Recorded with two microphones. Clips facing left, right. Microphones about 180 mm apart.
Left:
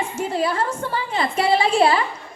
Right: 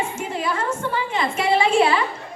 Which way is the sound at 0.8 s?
35° left (ahead or behind).